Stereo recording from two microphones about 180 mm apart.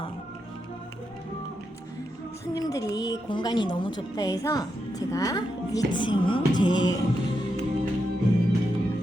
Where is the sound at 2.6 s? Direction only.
20° left (ahead or behind).